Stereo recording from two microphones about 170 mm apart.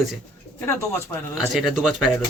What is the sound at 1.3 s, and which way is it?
Speech, centre (ahead or behind).